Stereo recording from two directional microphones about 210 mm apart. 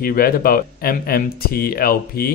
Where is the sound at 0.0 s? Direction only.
45° left (ahead or behind).